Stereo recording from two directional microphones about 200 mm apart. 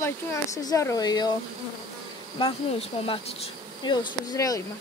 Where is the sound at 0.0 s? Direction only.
15° left (ahead or behind).